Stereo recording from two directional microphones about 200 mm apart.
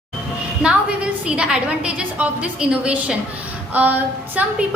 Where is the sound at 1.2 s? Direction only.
5° right (ahead or behind).